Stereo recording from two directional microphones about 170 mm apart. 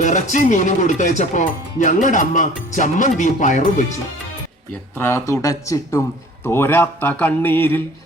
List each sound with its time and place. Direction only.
0.0 s speech: 45° left (ahead or behind)
4.9 s speech: 15° left (ahead or behind)